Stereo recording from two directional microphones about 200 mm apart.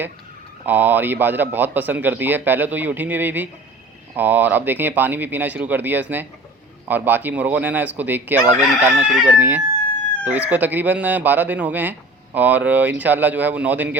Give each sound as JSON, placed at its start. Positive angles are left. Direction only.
{"t": 0.6, "sound": "a man's voice", "side_deg": -10}
{"t": 8.4, "sound": "speech", "side_deg": -35}
{"t": 9.0, "sound": "a man's voice", "side_deg": -5}